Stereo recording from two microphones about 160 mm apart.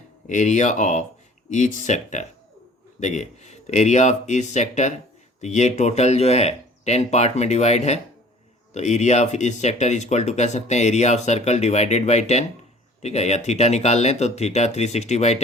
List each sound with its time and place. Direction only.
0.3 s speech: 50° left (ahead or behind)